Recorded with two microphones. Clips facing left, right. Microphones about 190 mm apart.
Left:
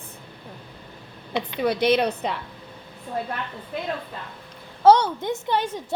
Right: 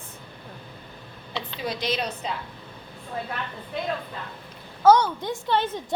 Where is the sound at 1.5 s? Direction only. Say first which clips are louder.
Left 9 dB; 60° left (ahead or behind).